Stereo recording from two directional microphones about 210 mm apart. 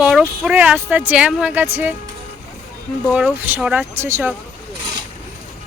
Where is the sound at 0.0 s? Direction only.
Centre (ahead or behind).